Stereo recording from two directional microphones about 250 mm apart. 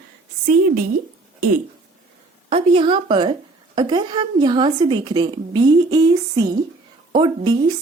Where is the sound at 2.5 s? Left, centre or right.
Right.